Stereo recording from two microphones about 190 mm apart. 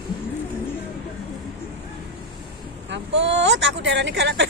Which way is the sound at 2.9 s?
70° right (ahead or behind).